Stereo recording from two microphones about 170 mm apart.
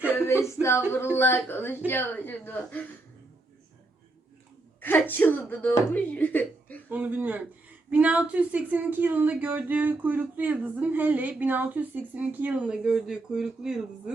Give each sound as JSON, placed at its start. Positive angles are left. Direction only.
{"t": 0.1, "sound": "a sound", "side_deg": 15}
{"t": 0.4, "sound": "speech", "side_deg": 15}
{"t": 4.8, "sound": "speech", "side_deg": 10}
{"t": 6.9, "sound": "speech", "side_deg": -10}